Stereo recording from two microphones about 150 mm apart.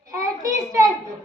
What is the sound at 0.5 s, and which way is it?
Speech, 20° right (ahead or behind).